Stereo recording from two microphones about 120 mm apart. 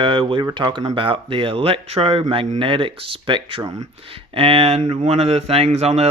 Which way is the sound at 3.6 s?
25° right (ahead or behind).